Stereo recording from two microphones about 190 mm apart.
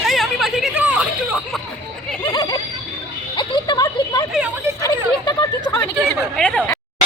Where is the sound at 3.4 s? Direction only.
25° left (ahead or behind).